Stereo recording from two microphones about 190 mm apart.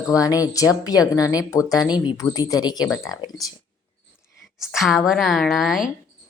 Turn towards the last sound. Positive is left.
turn(degrees=0)  # may be behind; listen again after turning